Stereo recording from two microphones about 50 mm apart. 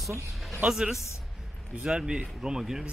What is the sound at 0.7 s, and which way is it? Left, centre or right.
Speech, centre.